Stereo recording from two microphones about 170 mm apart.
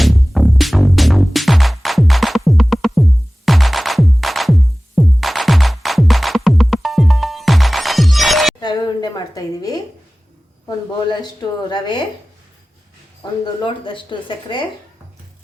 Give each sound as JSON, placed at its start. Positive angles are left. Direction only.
{"t": 0.0, "sound": "music", "side_deg": 0}
{"t": 8.6, "sound": "a sound", "side_deg": 25}
{"t": 10.7, "sound": "speech", "side_deg": 25}
{"t": 13.4, "sound": "speech", "side_deg": 30}